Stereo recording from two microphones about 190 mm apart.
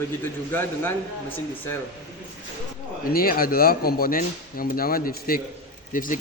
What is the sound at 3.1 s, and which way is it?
Speech, 50° left (ahead or behind).